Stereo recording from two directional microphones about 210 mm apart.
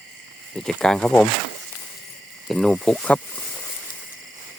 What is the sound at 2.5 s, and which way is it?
Speech, centre (ahead or behind).